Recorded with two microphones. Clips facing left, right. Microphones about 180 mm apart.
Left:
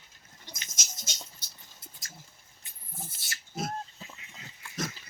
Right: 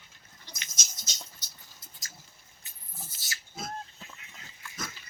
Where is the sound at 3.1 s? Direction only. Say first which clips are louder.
Even; 55° left (ahead or behind).